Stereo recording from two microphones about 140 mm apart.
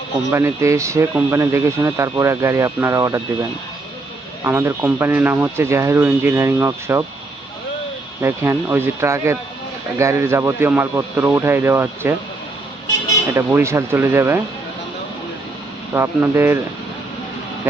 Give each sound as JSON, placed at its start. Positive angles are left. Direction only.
{"t": 0.3, "sound": "speech", "side_deg": -20}
{"t": 4.4, "sound": "speech", "side_deg": -15}
{"t": 8.2, "sound": "speech", "side_deg": -15}
{"t": 13.3, "sound": "speech", "side_deg": -20}
{"t": 16.0, "sound": "speech", "side_deg": -15}